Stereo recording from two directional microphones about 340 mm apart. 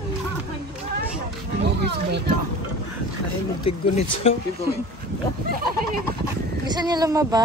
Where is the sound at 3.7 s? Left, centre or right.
Centre.